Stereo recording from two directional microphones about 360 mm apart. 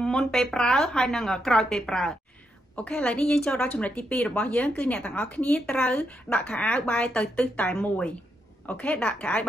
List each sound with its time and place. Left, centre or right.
0.0 s a woman's voice: centre